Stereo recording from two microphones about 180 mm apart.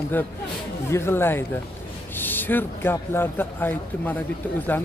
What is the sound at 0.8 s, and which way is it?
Speech, 15° left (ahead or behind).